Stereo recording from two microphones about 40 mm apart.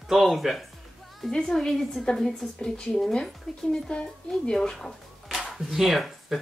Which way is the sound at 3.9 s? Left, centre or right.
Left.